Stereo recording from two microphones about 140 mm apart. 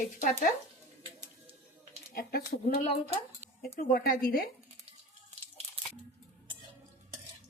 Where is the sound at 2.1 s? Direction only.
80° left.